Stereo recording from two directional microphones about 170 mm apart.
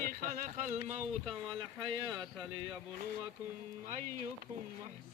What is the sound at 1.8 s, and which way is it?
Speech, 30° right (ahead or behind).